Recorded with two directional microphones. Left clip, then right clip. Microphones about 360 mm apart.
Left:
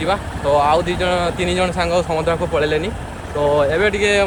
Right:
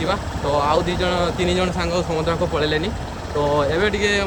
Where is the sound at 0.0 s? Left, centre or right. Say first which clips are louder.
Left 3 dB; centre.